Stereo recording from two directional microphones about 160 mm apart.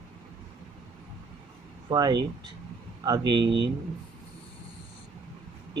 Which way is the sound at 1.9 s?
25° right (ahead or behind).